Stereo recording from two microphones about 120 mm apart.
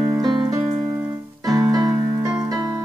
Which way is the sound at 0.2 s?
35° right (ahead or behind).